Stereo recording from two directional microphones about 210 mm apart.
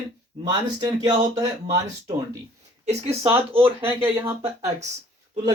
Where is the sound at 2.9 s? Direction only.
30° right (ahead or behind).